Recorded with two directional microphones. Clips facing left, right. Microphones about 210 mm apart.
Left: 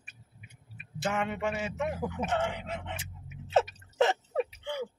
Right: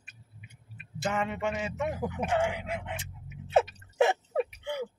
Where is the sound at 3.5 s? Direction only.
15° right (ahead or behind).